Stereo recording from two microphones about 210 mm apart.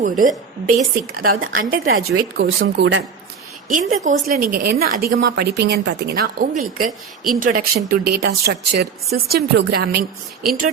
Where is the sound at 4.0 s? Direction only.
40° right (ahead or behind).